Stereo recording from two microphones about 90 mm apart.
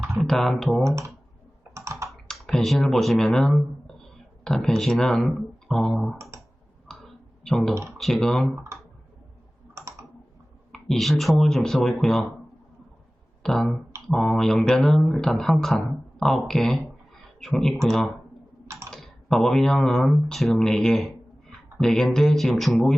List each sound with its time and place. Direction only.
0.2 s speech: centre (ahead or behind)
0.9 s speech: 30° right (ahead or behind)
1.7 s computer keyboard: 35° right (ahead or behind)
2.2 s speech: 5° left (ahead or behind)
6.8 s clicking: 5° left (ahead or behind)
7.9 s speech: centre (ahead or behind)
10.7 s speech: 5° left (ahead or behind)
13.4 s beatboxing: 5° left (ahead or behind)
14.1 s speech: 5° left (ahead or behind)